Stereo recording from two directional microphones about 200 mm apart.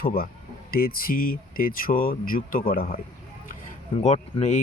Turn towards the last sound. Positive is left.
turn(degrees=35)  # may be behind; listen again after turning